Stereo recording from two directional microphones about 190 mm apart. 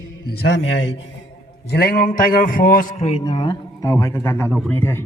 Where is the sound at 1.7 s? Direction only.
55° left (ahead or behind); by 5.0 s 10° left (ahead or behind).